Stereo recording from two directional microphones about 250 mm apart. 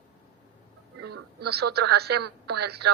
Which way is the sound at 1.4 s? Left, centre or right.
Right.